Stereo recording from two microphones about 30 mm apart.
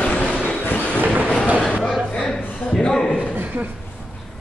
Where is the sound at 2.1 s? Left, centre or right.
Centre.